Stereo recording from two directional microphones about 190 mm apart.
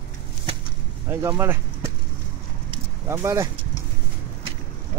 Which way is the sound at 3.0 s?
15° right (ahead or behind).